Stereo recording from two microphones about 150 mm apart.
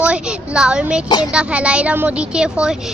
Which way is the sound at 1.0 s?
30° left (ahead or behind).